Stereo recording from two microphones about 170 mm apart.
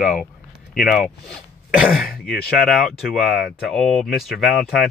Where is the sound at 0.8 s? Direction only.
Centre (ahead or behind).